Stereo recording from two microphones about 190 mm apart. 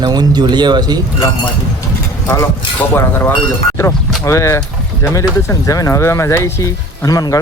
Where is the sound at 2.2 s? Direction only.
15° left (ahead or behind).